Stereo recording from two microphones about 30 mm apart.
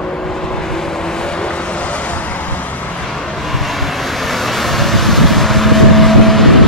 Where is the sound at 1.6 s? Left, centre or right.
Left.